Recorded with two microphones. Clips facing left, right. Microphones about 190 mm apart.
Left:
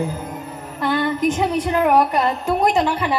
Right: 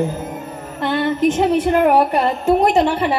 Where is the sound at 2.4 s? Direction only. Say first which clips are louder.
Right 6 dB; 25° right (ahead or behind).